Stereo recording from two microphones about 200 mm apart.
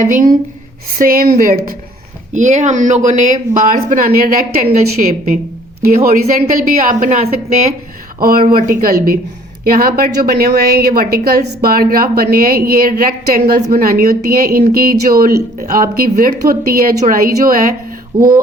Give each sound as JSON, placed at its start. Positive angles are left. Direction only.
{"t": 0.0, "sound": "a woman's voice", "side_deg": -40}
{"t": 8.2, "sound": "a woman's voice", "side_deg": -45}